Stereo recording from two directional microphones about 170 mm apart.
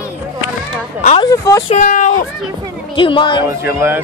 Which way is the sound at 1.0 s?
40° left (ahead or behind).